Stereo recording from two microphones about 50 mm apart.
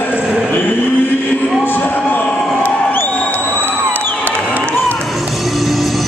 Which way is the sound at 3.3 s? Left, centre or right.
Right.